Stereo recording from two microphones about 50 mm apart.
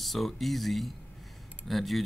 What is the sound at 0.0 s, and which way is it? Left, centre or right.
Speech, centre.